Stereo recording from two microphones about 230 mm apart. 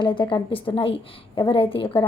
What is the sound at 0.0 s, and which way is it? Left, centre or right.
A woman's voice, centre.